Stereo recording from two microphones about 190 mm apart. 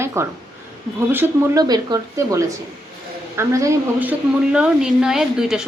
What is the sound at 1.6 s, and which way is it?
A woman's voice, 20° right (ahead or behind).